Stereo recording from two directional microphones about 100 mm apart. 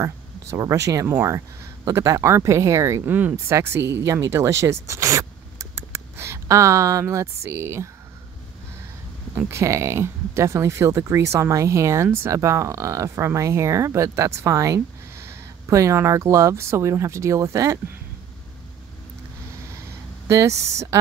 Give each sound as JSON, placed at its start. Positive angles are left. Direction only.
{"t": 0.0, "sound": "speech", "side_deg": -30}
{"t": 9.5, "sound": "speech", "side_deg": -30}
{"t": 20.2, "sound": "speech", "side_deg": -30}